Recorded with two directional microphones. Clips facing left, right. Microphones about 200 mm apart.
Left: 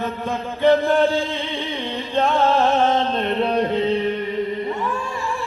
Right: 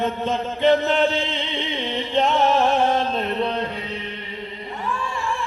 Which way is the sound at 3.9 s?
45° left (ahead or behind).